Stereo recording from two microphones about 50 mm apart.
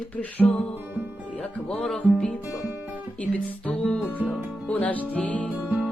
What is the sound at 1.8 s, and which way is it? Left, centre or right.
Music, centre.